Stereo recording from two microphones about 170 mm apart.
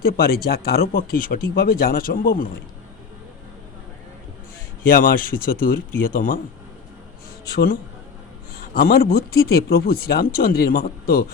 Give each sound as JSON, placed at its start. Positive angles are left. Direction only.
{"t": 0.0, "sound": "speech", "side_deg": 65}
{"t": 4.8, "sound": "speech", "side_deg": 55}
{"t": 7.4, "sound": "speech", "side_deg": 65}